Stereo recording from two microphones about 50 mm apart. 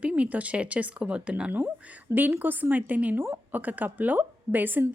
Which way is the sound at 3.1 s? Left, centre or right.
Right.